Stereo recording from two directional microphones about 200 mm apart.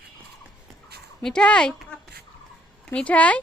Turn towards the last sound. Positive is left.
turn(degrees=5)  # may be behind; listen again after turning